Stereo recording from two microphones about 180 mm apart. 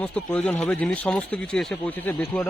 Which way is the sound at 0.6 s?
5° left (ahead or behind).